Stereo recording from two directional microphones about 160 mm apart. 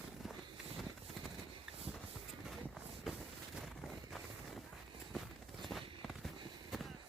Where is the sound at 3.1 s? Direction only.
Centre (ahead or behind).